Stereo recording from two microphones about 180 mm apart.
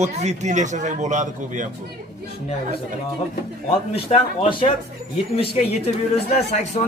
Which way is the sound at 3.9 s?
30° left (ahead or behind).